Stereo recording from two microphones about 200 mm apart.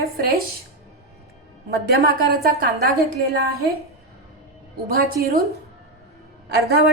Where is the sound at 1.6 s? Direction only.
50° right (ahead or behind).